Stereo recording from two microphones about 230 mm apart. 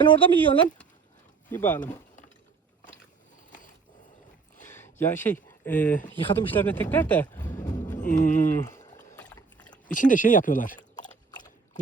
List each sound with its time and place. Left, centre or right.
0.0 s speech: left
1.5 s speech: centre
4.7 s speech: centre
7.7 s music: left
8.4 s speech: centre
9.1 s water: centre
9.8 s speech: left